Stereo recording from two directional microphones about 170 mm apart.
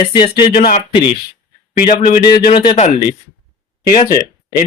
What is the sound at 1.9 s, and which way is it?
Speech, 35° left (ahead or behind).